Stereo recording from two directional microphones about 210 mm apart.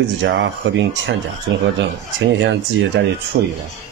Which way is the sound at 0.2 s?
60° right (ahead or behind).